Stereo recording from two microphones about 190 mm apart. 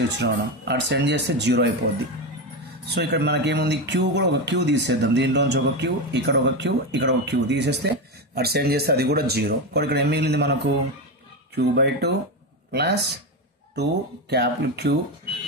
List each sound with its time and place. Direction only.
0.2 s speech: 65° right (ahead or behind)
2.9 s speech: 60° right (ahead or behind)
14.3 s speech: 60° right (ahead or behind)